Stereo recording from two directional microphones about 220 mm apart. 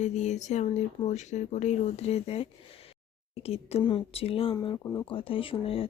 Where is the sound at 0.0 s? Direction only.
30° left (ahead or behind).